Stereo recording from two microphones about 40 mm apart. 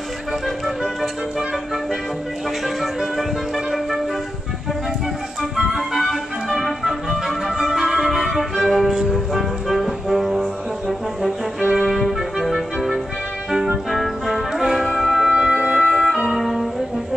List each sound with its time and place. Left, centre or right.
2.6 s music: centre
5.7 s music: centre
11.7 s music: centre
13.8 s music: centre
15.3 s music: right
15.8 s organ: centre
16.3 s music: centre